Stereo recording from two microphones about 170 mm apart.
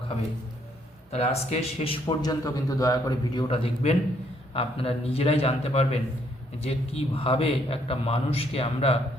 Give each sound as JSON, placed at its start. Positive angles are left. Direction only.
{"t": 1.1, "sound": "a man's voice", "side_deg": 40}